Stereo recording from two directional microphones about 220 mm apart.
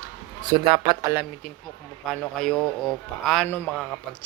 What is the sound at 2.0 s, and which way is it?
A man's voice, 5° left (ahead or behind).